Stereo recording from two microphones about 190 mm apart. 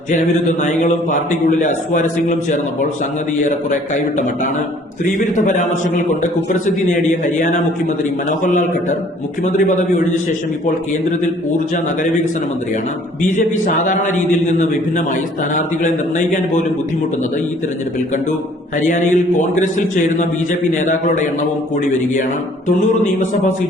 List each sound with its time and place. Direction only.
1.6 s a man's voice: 40° left (ahead or behind)
6.7 s a man's voice: 40° left (ahead or behind)
13.8 s a man's voice: 40° left (ahead or behind)
18.9 s a man's voice: 40° left (ahead or behind)